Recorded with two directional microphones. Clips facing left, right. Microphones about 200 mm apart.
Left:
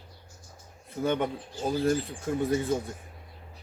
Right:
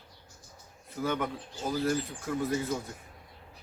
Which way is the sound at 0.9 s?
25° left (ahead or behind).